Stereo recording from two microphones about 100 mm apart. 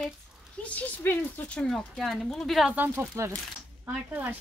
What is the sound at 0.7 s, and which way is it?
Speech, 25° left (ahead or behind).